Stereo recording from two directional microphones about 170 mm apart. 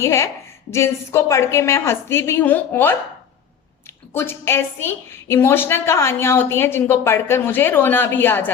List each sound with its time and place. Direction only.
0.0 s a woman's voice: 15° left (ahead or behind)
4.1 s a woman's voice: 15° left (ahead or behind)